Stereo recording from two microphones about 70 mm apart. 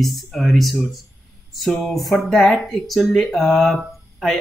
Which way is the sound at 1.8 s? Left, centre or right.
Centre.